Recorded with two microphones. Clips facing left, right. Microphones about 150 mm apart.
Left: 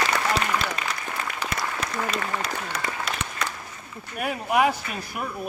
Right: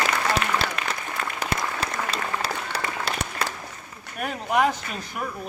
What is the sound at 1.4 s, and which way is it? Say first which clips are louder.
Applause: right 3 dB; 35° right (ahead or behind).